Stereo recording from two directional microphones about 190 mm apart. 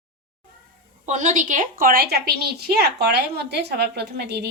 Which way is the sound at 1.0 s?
40° right (ahead or behind).